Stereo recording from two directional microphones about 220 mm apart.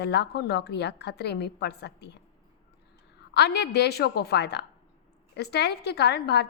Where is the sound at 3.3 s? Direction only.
50° left (ahead or behind).